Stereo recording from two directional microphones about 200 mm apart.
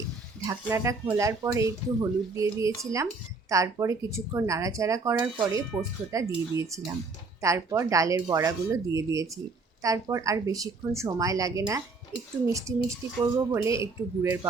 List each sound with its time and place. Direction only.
0.4 s speech: 15° right (ahead or behind)